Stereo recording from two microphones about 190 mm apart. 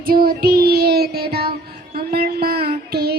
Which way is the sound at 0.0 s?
55° right (ahead or behind).